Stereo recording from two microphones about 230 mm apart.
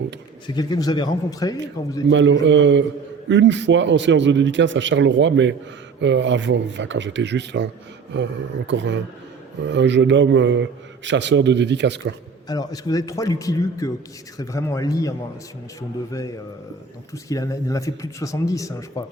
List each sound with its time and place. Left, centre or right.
0.4 s speech: centre
2.0 s a man's voice: right
12.5 s speech: centre
17.2 s speech: centre